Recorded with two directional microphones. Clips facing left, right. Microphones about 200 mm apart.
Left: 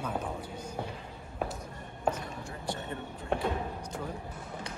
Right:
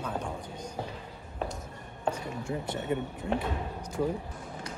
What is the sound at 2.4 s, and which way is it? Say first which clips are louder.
Speech: right 8 dB; 25° right (ahead or behind).